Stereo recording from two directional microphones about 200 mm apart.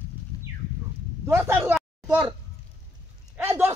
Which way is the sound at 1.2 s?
15° right (ahead or behind).